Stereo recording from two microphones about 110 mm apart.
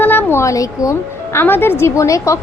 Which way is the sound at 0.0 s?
15° left (ahead or behind).